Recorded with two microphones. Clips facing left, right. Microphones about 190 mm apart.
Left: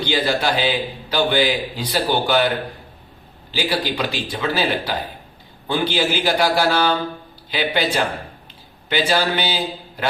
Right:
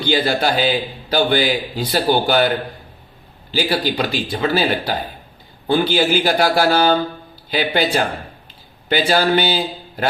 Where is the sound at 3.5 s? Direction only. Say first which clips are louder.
Right 3 dB; 45° right (ahead or behind).